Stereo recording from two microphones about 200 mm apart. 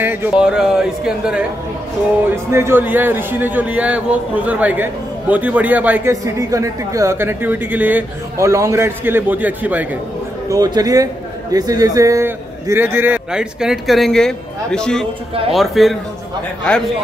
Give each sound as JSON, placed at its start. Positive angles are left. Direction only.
{"t": 0.0, "sound": "speech", "side_deg": -10}
{"t": 2.5, "sound": "a man's voice", "side_deg": -10}
{"t": 10.5, "sound": "a man's voice", "side_deg": -20}